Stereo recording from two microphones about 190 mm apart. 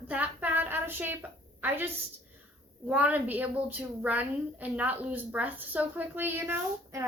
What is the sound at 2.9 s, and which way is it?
A woman's voice, 10° right (ahead or behind).